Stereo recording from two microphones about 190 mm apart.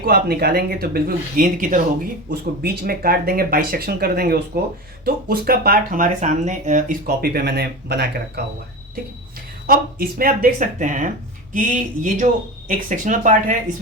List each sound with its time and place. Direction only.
0.0 s speech: 55° right (ahead or behind)
9.6 s speech: 50° right (ahead or behind)